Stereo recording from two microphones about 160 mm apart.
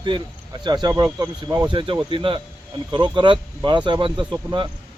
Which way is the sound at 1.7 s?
30° right (ahead or behind).